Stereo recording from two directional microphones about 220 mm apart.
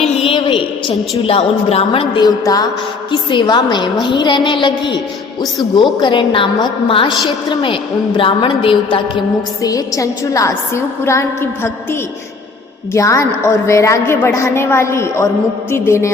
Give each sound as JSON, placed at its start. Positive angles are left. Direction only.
{"t": 0.2, "sound": "a woman's voice", "side_deg": 25}
{"t": 6.0, "sound": "a woman's voice", "side_deg": 20}